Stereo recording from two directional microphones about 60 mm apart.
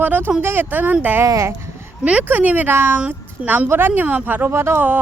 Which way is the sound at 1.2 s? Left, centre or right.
Right.